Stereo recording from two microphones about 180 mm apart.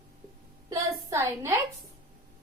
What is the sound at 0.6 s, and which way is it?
Speech, 15° right (ahead or behind).